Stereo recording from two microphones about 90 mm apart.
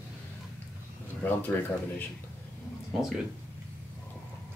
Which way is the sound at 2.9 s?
5° right (ahead or behind).